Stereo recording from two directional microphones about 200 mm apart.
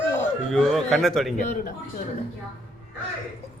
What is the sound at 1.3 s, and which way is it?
Speech, 40° left (ahead or behind).